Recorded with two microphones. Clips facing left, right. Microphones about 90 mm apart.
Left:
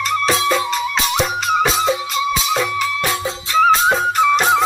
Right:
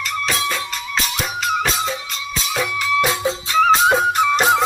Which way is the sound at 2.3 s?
5° left (ahead or behind).